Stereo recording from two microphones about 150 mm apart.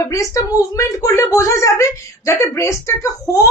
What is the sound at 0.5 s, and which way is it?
Speech, 20° left (ahead or behind).